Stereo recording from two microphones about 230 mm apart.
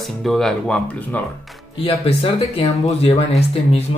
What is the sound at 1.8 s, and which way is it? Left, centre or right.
Speech, left.